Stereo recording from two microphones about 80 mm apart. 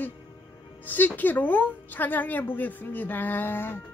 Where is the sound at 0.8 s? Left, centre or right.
Left.